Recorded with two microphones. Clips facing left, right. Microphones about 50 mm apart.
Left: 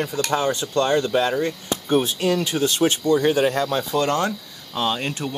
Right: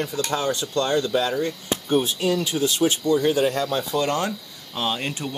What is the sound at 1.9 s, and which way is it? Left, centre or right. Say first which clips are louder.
Speech: left 2 dB; left.